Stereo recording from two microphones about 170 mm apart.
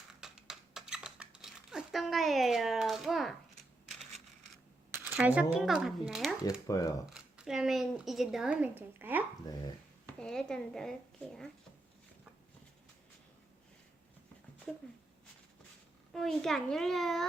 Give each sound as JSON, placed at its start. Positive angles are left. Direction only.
{"t": 0.2, "sound": "a sound", "side_deg": -5}
{"t": 5.0, "sound": "speech", "side_deg": -10}
{"t": 6.7, "sound": "speech", "side_deg": 20}
{"t": 7.0, "sound": "speech", "side_deg": -5}
{"t": 9.5, "sound": "speech", "side_deg": 20}
{"t": 10.1, "sound": "speech", "side_deg": 5}
{"t": 14.7, "sound": "speech", "side_deg": 5}
{"t": 16.1, "sound": "speech", "side_deg": 0}